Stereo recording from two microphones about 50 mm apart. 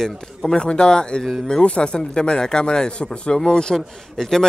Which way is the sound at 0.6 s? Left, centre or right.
Centre.